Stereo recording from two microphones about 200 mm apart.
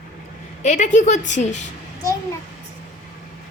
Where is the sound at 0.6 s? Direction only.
35° left (ahead or behind).